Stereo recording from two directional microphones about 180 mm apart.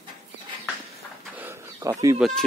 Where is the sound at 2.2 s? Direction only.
Centre (ahead or behind).